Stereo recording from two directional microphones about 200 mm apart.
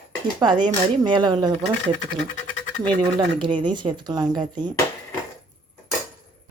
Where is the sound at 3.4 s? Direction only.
25° right (ahead or behind).